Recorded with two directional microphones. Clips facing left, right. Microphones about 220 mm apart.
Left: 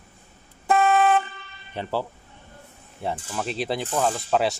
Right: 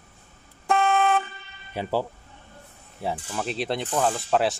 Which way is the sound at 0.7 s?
5° left (ahead or behind).